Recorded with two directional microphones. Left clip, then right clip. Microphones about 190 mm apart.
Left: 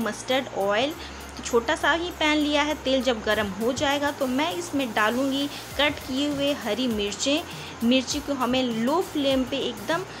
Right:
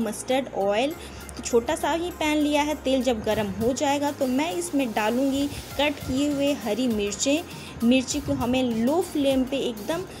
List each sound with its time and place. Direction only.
0.0 s a woman's voice: 15° right (ahead or behind)